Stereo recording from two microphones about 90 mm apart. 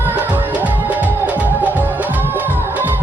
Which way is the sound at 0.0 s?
25° right (ahead or behind).